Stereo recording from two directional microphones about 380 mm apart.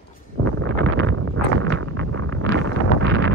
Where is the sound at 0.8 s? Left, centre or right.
Right.